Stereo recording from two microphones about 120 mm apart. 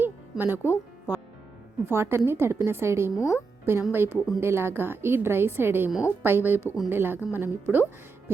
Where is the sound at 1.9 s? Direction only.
20° right (ahead or behind).